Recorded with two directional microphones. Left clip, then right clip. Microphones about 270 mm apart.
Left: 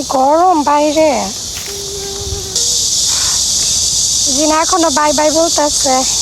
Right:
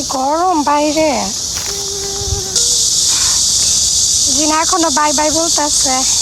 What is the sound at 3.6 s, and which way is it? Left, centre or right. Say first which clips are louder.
Insect: right 1 dB; right.